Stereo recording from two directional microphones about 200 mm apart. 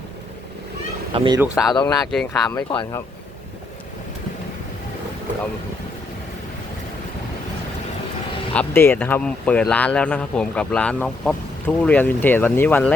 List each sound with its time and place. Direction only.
1.1 s speech: 25° right (ahead or behind)
1.4 s speech: 5° right (ahead or behind)
1.7 s speech: 20° left (ahead or behind)
2.0 s speech: centre (ahead or behind)
2.6 s speech: 20° left (ahead or behind)
8.5 s speech: 10° left (ahead or behind)